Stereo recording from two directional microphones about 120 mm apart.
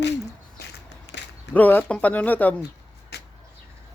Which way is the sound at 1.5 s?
15° left (ahead or behind).